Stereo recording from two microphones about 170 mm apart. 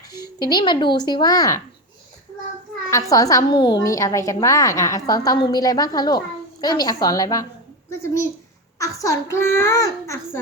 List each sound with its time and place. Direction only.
0.1 s speech: 25° left (ahead or behind)
2.9 s a woman's voice: 20° left (ahead or behind)
8.8 s a child's voice: 20° left (ahead or behind)